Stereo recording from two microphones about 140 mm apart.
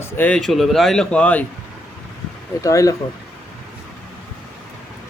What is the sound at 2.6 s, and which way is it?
Speech, 25° left (ahead or behind).